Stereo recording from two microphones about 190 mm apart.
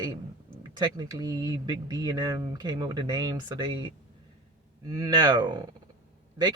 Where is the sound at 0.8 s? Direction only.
20° right (ahead or behind).